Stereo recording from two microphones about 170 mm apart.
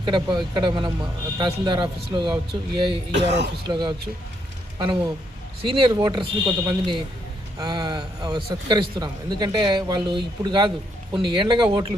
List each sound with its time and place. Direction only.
0.0 s speech: 25° right (ahead or behind)
3.1 s speech: 90° right
3.7 s speech: 25° right (ahead or behind)